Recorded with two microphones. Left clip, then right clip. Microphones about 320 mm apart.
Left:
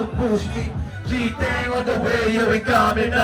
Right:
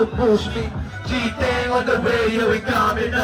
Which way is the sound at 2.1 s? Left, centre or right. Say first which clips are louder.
Even; left.